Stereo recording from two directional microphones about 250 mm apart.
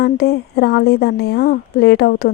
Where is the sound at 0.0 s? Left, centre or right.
Left.